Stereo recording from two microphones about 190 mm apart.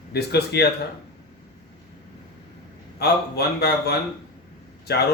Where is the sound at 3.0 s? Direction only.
55° left (ahead or behind).